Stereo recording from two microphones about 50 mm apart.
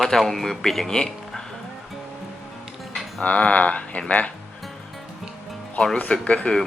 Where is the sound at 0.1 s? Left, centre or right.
Centre.